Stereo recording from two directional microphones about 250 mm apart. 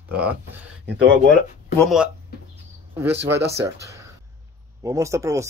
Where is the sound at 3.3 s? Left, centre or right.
Right.